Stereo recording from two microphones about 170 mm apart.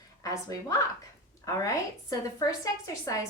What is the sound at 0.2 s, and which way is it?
A woman's voice, 20° left (ahead or behind).